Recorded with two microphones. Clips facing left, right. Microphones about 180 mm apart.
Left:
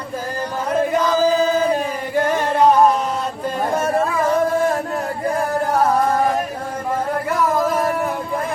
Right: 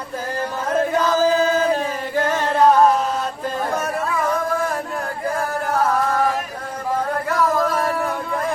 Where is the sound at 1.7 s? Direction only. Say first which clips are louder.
Left 2 dB; 15° left (ahead or behind).